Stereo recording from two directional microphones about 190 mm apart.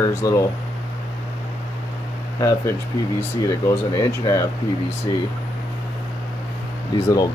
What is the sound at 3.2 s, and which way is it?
Speech, 15° left (ahead or behind).